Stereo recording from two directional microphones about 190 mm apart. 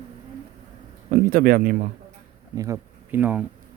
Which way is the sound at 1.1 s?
50° right (ahead or behind).